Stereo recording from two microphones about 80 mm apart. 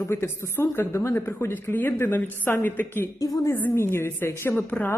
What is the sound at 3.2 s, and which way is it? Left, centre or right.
Speech, left.